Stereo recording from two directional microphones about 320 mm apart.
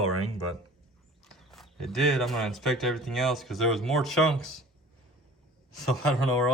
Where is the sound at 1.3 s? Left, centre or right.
Centre.